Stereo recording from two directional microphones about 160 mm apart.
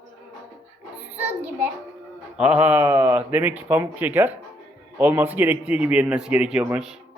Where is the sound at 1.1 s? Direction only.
10° right (ahead or behind).